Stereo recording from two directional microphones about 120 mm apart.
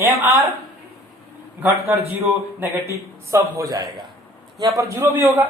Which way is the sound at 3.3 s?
25° right (ahead or behind).